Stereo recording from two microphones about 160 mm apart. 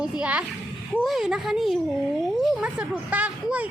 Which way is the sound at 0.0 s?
5° right (ahead or behind).